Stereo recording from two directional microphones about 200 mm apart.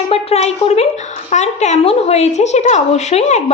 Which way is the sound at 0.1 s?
30° left (ahead or behind).